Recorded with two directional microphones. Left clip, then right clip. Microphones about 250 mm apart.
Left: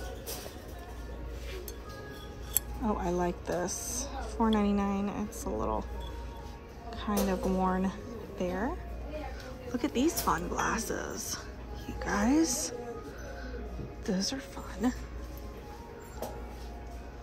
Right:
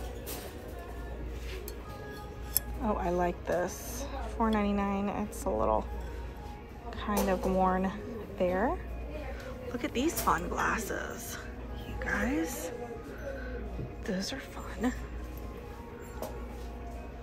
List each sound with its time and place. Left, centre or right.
2.8 s a woman's voice: centre
6.9 s a woman's voice: centre
14.0 s a woman's voice: centre